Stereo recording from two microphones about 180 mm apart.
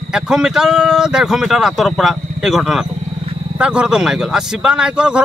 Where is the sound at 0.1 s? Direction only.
5° right (ahead or behind).